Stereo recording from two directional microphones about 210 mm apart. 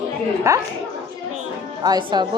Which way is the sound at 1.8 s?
20° right (ahead or behind).